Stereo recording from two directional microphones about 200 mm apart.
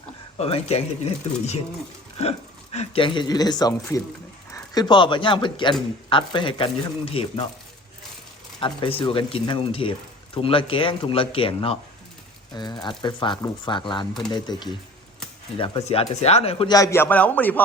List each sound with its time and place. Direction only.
0.3 s speech: 30° left (ahead or behind)
2.7 s speech: 25° left (ahead or behind)
8.6 s speech: 25° left (ahead or behind)
16.7 s a man's voice: 15° left (ahead or behind)